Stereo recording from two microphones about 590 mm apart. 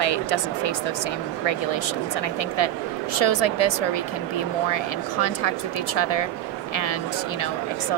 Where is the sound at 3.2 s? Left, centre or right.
Left.